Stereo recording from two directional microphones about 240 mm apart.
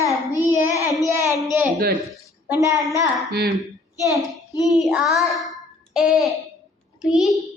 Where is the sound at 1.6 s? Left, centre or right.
Right.